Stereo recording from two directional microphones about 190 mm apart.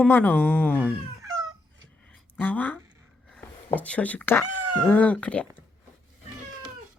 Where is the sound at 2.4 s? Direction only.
10° left (ahead or behind).